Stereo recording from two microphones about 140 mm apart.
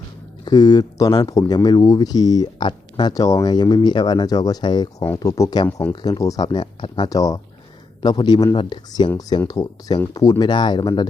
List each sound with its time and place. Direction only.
0.4 s speech: 30° left (ahead or behind)
7.1 s speech: 25° left (ahead or behind)